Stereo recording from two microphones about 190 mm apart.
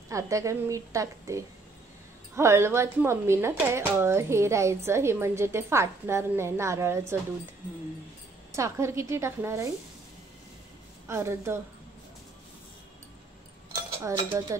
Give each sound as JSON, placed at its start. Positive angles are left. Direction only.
{"t": 0.1, "sound": "speech", "side_deg": -15}
{"t": 8.5, "sound": "speech", "side_deg": -15}
{"t": 11.1, "sound": "speech", "side_deg": -15}
{"t": 14.0, "sound": "speech", "side_deg": -15}